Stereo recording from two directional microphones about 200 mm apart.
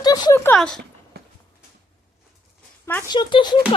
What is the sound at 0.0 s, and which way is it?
Speech, 20° left (ahead or behind).